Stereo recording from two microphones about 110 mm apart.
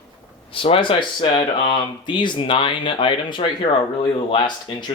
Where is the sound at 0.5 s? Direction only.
55° left (ahead or behind).